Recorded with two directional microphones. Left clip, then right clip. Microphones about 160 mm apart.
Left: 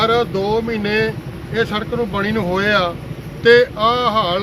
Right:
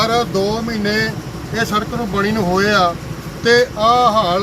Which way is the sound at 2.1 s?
40° left (ahead or behind).